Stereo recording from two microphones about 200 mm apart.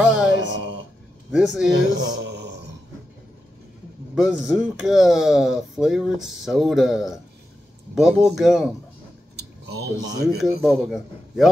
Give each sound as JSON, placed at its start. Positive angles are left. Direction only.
{"t": 0.0, "sound": "mantra", "side_deg": -5}
{"t": 0.4, "sound": "music", "side_deg": -65}
{"t": 1.3, "sound": "speech", "side_deg": -5}
{"t": 2.0, "sound": "speech", "side_deg": -55}
{"t": 4.1, "sound": "speech", "side_deg": -5}
{"t": 9.4, "sound": "a sound", "side_deg": -55}
{"t": 10.4, "sound": "speech", "side_deg": 0}